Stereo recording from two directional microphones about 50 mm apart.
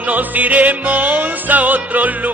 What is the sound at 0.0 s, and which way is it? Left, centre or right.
Music, right.